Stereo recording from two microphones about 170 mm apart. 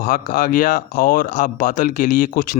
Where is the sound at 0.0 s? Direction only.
55° left (ahead or behind).